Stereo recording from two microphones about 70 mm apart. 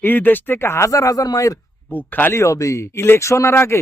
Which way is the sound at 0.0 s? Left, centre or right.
Left.